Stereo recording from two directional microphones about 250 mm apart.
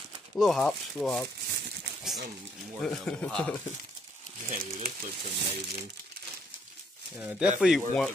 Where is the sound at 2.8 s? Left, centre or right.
Centre.